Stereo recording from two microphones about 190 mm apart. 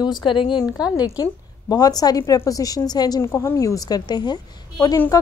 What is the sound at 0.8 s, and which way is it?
Speech, 5° right (ahead or behind).